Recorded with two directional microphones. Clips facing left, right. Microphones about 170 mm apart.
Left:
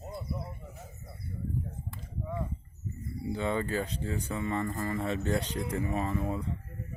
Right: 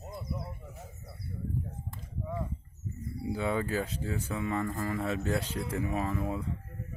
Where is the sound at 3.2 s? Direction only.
5° right (ahead or behind).